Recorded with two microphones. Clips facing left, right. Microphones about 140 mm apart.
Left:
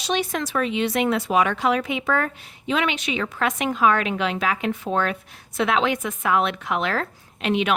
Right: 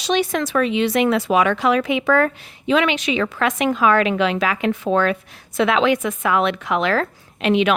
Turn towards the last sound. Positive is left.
turn(degrees=-90)